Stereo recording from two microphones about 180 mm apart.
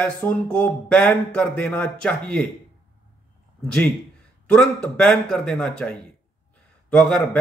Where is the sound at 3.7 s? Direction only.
5° left (ahead or behind).